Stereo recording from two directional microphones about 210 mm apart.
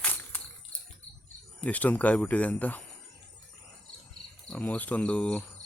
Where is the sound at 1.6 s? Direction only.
5° left (ahead or behind).